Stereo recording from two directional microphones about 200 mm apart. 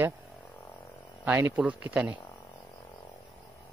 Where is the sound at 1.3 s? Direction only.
10° right (ahead or behind).